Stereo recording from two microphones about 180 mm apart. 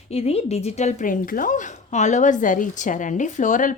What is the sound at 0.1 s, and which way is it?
A woman's voice, 35° left (ahead or behind).